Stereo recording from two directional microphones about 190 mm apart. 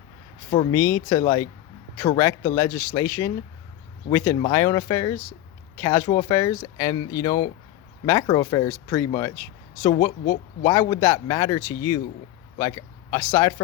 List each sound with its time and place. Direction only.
0.5 s speech: 20° left (ahead or behind)